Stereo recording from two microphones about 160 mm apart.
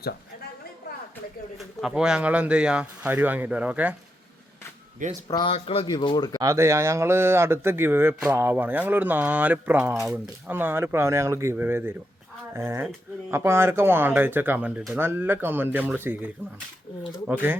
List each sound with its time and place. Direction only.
1.5 s speech: 5° right (ahead or behind)
5.3 s speech: 30° left (ahead or behind)
6.4 s speech: 20° right (ahead or behind)